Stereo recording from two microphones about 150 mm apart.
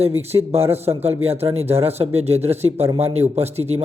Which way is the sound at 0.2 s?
40° right (ahead or behind).